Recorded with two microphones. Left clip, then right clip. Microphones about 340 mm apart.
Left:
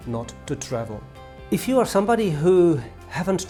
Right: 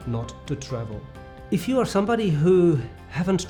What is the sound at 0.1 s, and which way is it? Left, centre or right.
Speech, left.